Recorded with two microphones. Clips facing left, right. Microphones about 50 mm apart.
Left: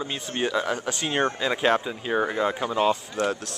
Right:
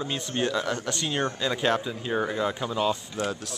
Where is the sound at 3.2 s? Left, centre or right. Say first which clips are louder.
Left 5 dB; left.